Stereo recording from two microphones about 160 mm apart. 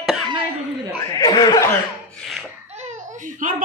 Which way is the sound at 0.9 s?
25° left (ahead or behind).